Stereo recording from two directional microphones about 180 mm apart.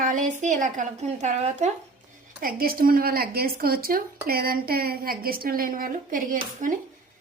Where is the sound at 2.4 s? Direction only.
55° right (ahead or behind).